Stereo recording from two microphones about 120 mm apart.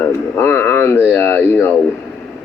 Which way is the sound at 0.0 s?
20° left (ahead or behind).